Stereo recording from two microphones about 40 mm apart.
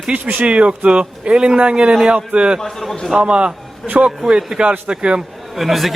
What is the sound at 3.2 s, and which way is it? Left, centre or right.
A man's voice, right.